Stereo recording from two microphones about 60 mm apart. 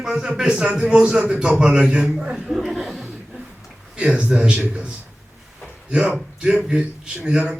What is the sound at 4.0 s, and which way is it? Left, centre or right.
Speech, centre.